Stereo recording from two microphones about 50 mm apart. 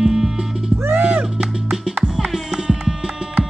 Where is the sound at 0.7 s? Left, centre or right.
Right.